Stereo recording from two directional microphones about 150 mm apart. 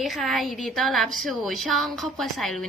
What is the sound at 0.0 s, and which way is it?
A woman's voice, centre (ahead or behind).